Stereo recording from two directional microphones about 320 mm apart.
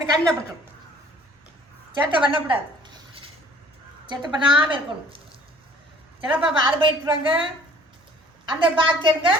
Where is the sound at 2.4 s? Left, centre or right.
Centre.